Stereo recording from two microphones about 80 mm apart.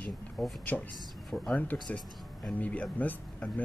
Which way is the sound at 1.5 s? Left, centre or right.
Centre.